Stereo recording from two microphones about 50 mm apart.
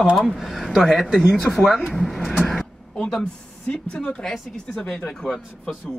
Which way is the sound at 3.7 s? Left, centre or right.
Left.